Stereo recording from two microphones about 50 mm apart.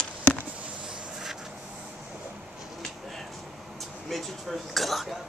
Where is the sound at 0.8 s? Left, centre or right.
Centre.